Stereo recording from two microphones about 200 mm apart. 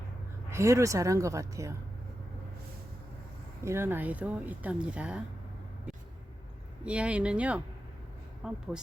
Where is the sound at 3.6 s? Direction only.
10° right (ahead or behind).